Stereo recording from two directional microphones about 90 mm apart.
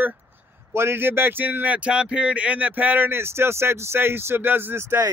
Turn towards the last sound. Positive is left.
turn(degrees=-25)  # may be behind; listen again after turning